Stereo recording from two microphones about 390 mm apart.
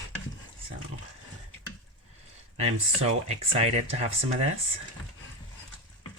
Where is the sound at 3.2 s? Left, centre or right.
Centre.